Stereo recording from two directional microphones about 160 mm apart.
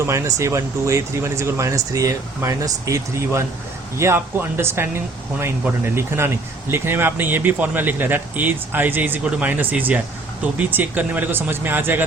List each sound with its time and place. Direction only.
0.0 s speech: 20° right (ahead or behind)